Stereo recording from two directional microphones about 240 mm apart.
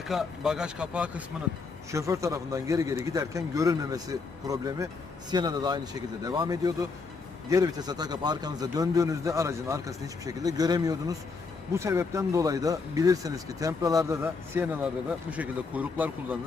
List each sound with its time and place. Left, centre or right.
0.0 s speech: centre